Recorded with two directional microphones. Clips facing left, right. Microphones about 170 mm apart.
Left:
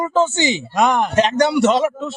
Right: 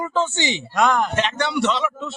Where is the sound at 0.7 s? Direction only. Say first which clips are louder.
Left 1 dB; 20° left (ahead or behind).